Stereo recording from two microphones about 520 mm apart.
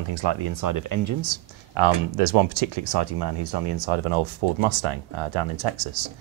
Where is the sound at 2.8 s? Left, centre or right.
Right.